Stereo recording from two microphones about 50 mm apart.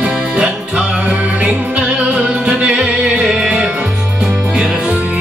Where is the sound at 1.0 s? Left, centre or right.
Right.